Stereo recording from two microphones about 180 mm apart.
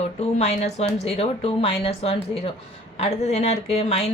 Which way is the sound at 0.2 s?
35° left (ahead or behind).